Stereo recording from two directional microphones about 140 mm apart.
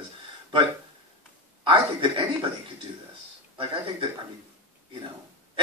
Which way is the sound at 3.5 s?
40° right (ahead or behind).